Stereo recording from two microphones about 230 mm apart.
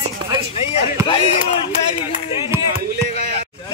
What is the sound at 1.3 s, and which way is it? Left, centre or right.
Speech, left.